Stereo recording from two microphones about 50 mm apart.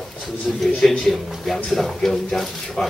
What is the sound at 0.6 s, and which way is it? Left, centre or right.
Speech, centre.